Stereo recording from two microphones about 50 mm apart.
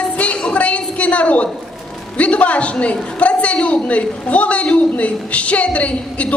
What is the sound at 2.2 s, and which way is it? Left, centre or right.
A woman's voice, left.